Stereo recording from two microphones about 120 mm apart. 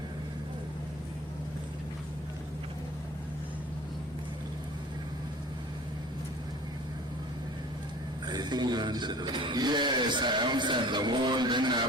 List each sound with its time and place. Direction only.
8.3 s speech: 35° right (ahead or behind)